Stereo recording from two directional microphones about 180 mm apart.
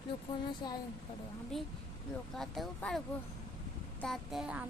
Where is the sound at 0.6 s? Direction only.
25° left (ahead or behind).